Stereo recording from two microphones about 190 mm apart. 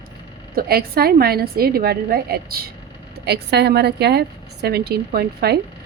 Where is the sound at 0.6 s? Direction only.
55° right (ahead or behind).